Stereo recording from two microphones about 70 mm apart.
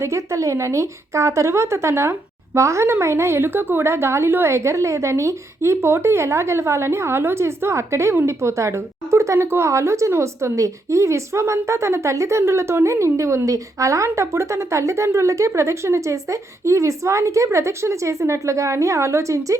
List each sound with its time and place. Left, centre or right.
0.0 s a woman's voice: right